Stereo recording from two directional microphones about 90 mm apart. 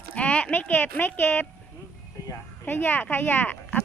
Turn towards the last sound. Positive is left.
turn(degrees=20)  # may be behind; listen again after turning